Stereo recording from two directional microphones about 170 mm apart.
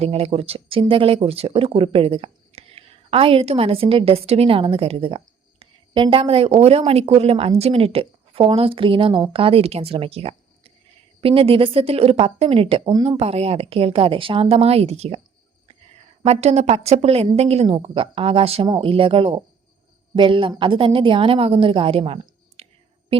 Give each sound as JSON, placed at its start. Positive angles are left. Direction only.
{"t": 0.0, "sound": "speech", "side_deg": -35}
{"t": 16.2, "sound": "a woman's voice", "side_deg": -40}